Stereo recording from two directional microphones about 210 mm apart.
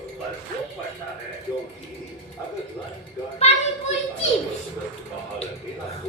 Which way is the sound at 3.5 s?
30° left (ahead or behind).